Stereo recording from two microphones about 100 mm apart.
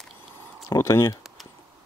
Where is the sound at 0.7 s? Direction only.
30° left (ahead or behind).